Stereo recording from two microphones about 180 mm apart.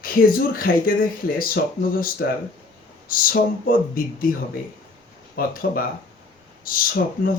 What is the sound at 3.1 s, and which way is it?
Speech, 50° left (ahead or behind).